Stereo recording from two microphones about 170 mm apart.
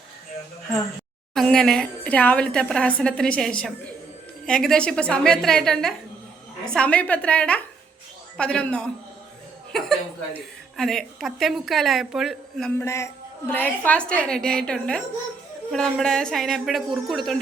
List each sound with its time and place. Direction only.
1.3 s a woman's voice: centre (ahead or behind)
12.8 s a woman's voice: 15° left (ahead or behind); by 17.3 s centre (ahead or behind)